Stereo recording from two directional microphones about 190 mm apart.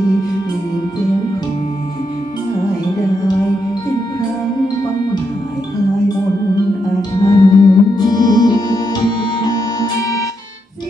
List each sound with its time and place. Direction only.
7.0 s music: 20° left (ahead or behind)